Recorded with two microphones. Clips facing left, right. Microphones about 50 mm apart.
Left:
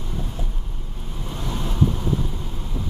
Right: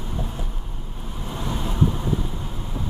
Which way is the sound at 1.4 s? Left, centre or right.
Centre.